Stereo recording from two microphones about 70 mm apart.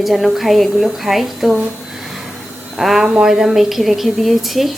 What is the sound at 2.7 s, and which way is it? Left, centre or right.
A woman's voice, centre.